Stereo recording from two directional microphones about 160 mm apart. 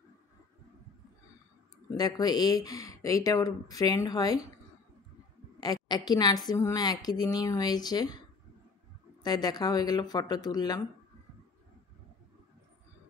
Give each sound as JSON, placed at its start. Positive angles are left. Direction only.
{"t": 2.0, "sound": "a woman's voice", "side_deg": 25}
{"t": 5.6, "sound": "a woman's voice", "side_deg": 25}
{"t": 9.2, "sound": "a woman's voice", "side_deg": 25}